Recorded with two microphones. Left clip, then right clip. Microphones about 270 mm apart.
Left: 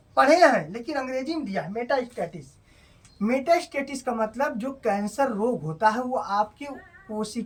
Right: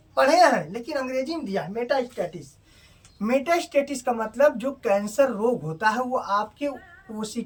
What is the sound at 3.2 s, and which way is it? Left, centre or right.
Speech, centre.